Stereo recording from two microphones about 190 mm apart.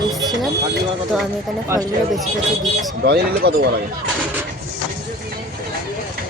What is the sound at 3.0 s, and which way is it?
Speech, 55° right (ahead or behind).